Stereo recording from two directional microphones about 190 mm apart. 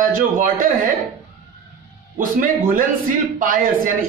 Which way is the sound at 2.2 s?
45° right (ahead or behind).